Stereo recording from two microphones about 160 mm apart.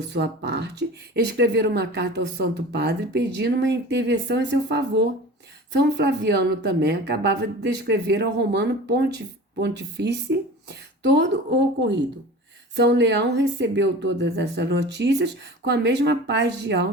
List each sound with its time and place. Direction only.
0.0 s speech: 90° right
12.7 s speech: 90° right